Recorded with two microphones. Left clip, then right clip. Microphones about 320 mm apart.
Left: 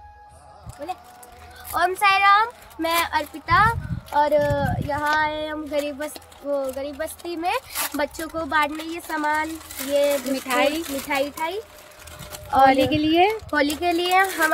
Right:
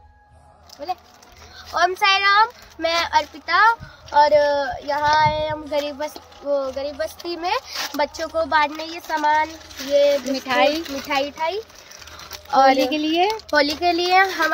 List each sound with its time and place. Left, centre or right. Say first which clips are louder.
1.7 s a child's voice: right 1 dB; centre
10.3 s speech: right 3 dB; centre
11.1 s a child's voice: right 3 dB; centre
12.9 s speech: left 1 dB; centre
13.5 s a child's voice: right 3 dB; centre